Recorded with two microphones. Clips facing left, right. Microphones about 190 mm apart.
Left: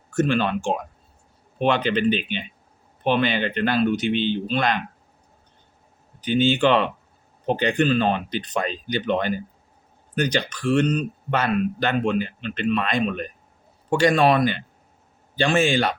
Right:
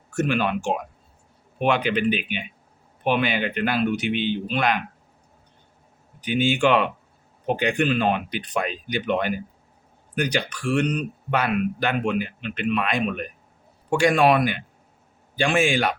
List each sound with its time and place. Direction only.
0.1 s speech: 10° right (ahead or behind)
6.2 s speech: 10° right (ahead or behind)
10.5 s speech: 10° right (ahead or behind)